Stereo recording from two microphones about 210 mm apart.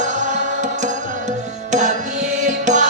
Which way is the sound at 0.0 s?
35° right (ahead or behind).